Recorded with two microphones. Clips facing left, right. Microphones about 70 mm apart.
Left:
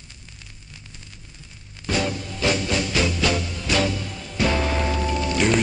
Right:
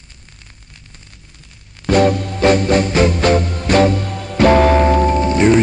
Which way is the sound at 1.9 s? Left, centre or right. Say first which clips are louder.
Right 12 dB; right.